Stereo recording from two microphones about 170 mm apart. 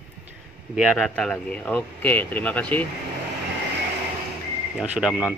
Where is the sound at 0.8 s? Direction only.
Centre (ahead or behind).